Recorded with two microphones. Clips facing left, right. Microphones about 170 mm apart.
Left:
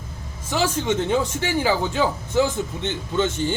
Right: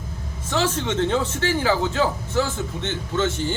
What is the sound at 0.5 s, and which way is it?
A man's voice, 10° left (ahead or behind).